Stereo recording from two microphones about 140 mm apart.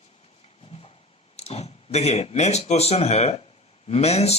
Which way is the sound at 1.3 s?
50° left (ahead or behind).